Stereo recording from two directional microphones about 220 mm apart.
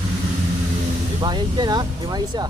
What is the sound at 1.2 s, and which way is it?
Speech, 20° right (ahead or behind).